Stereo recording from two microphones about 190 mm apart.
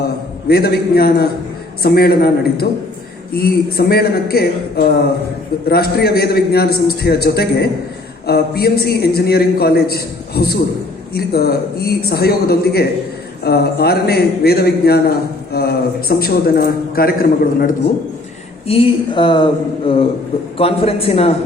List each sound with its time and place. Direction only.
0.4 s a man's voice: 55° left (ahead or behind)
18.7 s a man's voice: 30° left (ahead or behind)